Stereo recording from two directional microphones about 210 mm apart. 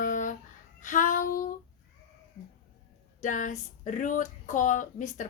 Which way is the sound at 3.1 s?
40° left (ahead or behind).